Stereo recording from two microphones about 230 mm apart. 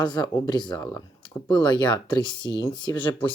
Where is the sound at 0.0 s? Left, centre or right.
Centre.